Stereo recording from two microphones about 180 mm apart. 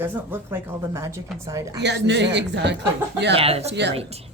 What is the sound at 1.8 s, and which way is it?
Speech, 70° right (ahead or behind).